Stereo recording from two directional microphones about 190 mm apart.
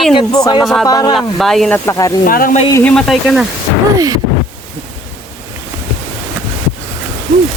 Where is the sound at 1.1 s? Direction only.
Centre (ahead or behind).